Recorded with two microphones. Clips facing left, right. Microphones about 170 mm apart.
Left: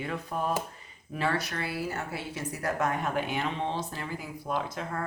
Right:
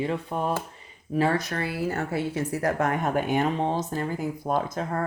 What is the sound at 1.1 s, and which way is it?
Speech, 40° right (ahead or behind).